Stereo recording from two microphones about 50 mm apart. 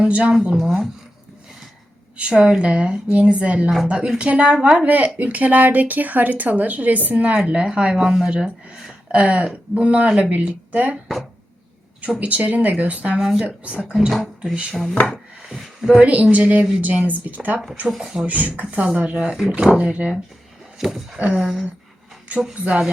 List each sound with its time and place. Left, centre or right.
0.0 s speech: right
0.5 s speech: centre
2.1 s a woman's voice: centre
4.9 s a woman's voice: right
12.2 s a woman's voice: right
13.1 s a woman's voice: centre
14.1 s speech: centre
14.5 s a woman's voice: centre
15.1 s a sound: centre
16.0 s a woman's voice: right
18.0 s speech: centre
18.3 s a woman's voice: right
19.1 s a woman's voice: centre
20.7 s speech: centre